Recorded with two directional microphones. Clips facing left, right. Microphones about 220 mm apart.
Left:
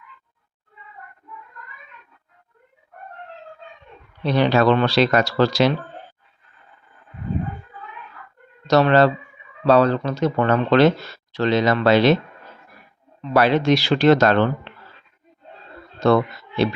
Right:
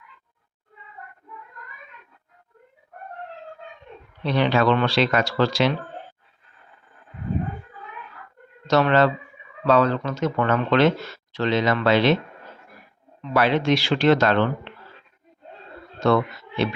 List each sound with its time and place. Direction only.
4.2 s speech: 40° left (ahead or behind)
8.6 s speech: 35° left (ahead or behind)
13.3 s speech: 40° left (ahead or behind)
16.0 s speech: 35° left (ahead or behind)